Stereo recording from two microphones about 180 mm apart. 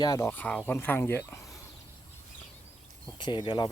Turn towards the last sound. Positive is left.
turn(degrees=25)  # may be behind; listen again after turning